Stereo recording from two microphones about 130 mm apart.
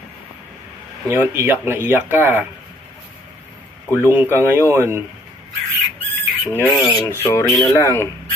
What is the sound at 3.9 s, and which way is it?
Speech, 15° right (ahead or behind).